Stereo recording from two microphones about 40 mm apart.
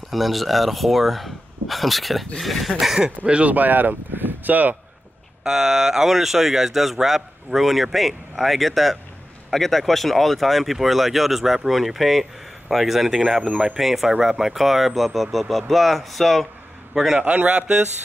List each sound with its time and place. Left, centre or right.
0.1 s speech: centre
3.3 s speech: right
3.5 s speech: right
5.4 s speech: centre
13.5 s speech: centre
13.7 s a man's voice: centre
17.5 s speech: right